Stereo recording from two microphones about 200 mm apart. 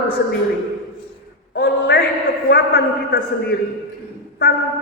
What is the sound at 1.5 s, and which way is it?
A man's voice, 55° left (ahead or behind).